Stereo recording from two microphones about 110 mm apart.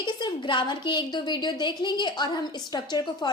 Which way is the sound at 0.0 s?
45° left (ahead or behind).